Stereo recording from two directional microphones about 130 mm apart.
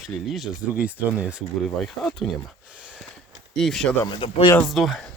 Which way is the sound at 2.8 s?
5° right (ahead or behind).